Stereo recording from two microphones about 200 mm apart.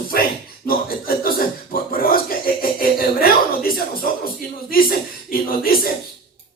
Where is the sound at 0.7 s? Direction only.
45° left (ahead or behind).